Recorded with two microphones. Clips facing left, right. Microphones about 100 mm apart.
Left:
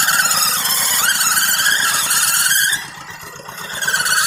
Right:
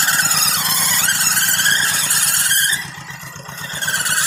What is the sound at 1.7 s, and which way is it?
Vehicle, 15° left (ahead or behind).